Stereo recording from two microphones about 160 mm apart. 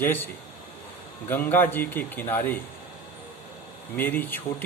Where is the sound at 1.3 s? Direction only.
10° left (ahead or behind).